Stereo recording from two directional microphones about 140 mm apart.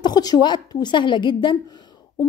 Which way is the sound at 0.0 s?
30° left (ahead or behind).